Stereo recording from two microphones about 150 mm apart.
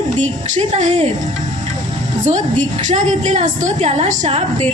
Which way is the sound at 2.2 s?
55° right (ahead or behind).